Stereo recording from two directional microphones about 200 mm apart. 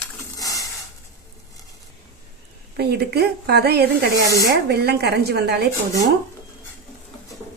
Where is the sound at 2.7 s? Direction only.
55° right (ahead or behind).